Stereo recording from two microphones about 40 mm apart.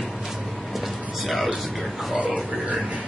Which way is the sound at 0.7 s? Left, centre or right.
Centre.